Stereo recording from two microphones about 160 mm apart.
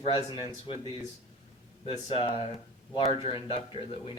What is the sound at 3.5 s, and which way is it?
Speech, 35° left (ahead or behind).